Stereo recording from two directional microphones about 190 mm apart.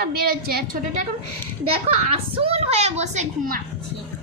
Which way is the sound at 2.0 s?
30° right (ahead or behind).